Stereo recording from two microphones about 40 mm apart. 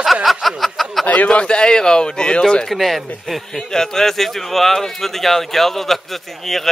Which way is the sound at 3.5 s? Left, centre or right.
Centre.